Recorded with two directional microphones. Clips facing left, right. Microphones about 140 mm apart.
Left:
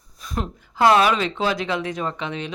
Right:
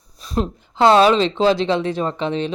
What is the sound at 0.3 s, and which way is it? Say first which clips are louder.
A woman's voice: right 4 dB; 25° right (ahead or behind).